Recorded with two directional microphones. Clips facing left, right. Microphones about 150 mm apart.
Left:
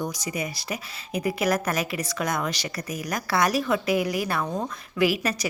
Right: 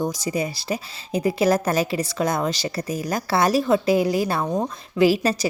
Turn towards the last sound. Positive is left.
turn(degrees=-30)  # may be behind; listen again after turning